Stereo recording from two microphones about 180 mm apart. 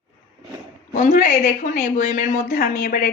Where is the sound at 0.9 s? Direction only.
50° left (ahead or behind).